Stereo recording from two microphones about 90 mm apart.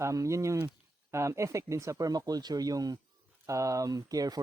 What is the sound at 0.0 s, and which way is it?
A man's voice, 35° right (ahead or behind).